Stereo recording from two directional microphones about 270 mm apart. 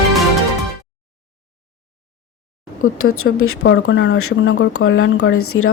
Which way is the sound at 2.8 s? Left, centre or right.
Left.